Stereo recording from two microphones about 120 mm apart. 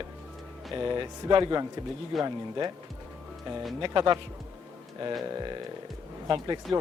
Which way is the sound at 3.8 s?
40° right (ahead or behind).